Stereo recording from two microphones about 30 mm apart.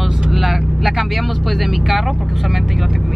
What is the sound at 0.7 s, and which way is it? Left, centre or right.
Speech, centre.